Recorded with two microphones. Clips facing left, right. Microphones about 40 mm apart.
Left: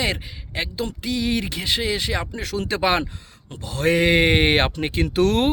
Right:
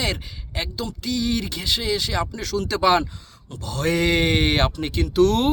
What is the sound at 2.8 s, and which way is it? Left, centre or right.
A man's voice, left.